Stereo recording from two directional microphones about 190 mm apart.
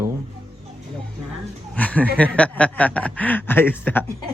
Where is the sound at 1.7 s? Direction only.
5° left (ahead or behind).